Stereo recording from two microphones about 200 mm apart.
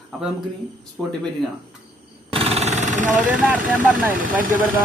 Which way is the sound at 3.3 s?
5° right (ahead or behind).